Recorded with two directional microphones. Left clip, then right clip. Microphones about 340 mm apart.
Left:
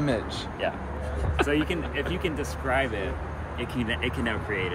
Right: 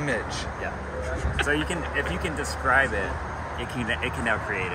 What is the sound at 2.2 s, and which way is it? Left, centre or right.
Speech, centre.